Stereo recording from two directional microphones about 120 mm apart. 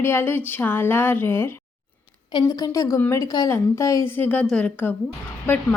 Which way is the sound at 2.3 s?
30° left (ahead or behind).